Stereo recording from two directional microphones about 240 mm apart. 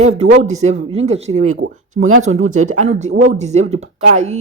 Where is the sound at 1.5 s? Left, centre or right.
Right.